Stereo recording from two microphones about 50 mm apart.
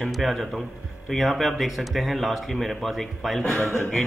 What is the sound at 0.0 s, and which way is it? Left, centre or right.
A man's voice, centre.